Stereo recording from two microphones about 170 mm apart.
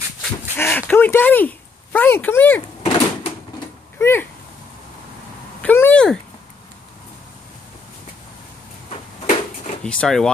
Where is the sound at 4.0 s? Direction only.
15° left (ahead or behind).